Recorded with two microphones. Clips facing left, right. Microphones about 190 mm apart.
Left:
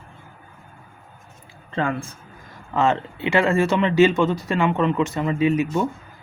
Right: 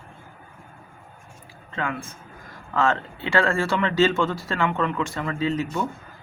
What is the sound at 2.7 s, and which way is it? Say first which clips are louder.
Speech: left 3 dB; 20° left (ahead or behind).